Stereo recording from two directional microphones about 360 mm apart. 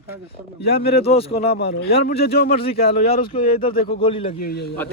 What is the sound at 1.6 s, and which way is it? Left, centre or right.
A man's voice, left.